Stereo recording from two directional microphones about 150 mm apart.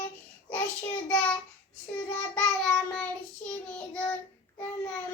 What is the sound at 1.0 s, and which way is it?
Speech, 10° left (ahead or behind).